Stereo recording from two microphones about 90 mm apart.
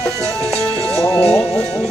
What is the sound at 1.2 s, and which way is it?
Speech, 10° left (ahead or behind).